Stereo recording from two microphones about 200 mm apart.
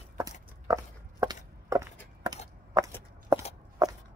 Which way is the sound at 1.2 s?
20° right (ahead or behind).